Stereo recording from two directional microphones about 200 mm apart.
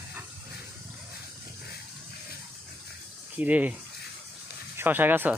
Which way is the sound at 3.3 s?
10° right (ahead or behind).